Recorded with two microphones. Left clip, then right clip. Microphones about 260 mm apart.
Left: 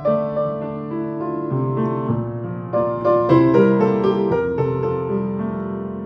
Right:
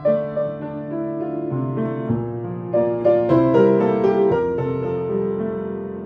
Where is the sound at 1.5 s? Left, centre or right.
Centre.